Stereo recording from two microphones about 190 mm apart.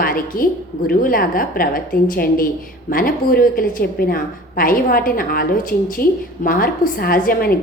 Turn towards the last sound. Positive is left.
turn(degrees=50)  # may be behind; listen again after turning